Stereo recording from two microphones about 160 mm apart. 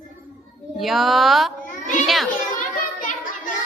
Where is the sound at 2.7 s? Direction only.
60° left (ahead or behind).